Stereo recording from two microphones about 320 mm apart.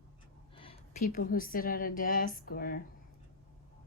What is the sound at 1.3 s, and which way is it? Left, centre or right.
A woman's voice, left.